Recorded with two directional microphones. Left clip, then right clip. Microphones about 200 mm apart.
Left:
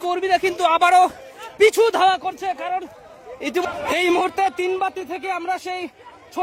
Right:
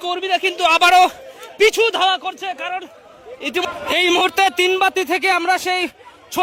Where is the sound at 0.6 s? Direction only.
5° left (ahead or behind).